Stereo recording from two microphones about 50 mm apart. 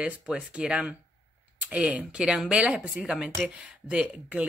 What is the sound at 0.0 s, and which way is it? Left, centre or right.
Speech, centre.